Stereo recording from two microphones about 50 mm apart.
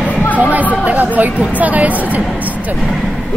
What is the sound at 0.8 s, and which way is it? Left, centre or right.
Speech, right.